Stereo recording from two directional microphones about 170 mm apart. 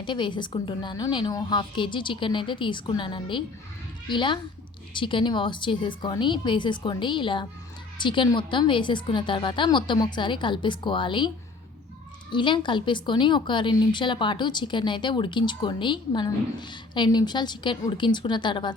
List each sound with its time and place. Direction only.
0.0 s a woman's voice: 25° left (ahead or behind)
12.3 s a woman's voice: 30° left (ahead or behind)